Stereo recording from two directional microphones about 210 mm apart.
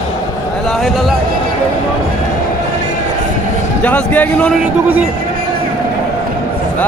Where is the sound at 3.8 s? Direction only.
5° left (ahead or behind).